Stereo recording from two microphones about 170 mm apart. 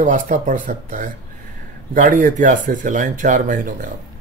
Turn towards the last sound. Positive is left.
turn(degrees=-50)  # may be behind; listen again after turning